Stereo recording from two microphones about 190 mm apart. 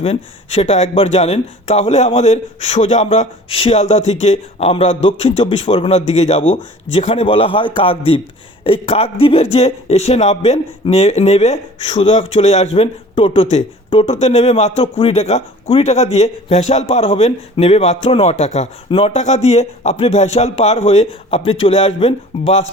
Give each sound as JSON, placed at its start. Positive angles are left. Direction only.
{"t": 0.0, "sound": "a man's voice", "side_deg": 35}